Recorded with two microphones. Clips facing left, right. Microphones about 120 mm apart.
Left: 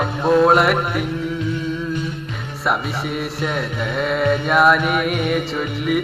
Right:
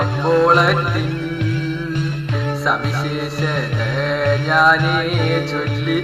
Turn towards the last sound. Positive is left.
turn(degrees=0)  # may be behind; listen again after turning